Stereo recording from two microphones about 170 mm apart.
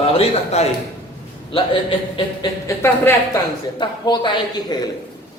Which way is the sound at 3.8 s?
25° left (ahead or behind).